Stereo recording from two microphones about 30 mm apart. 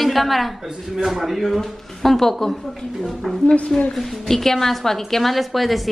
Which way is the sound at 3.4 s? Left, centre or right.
Left.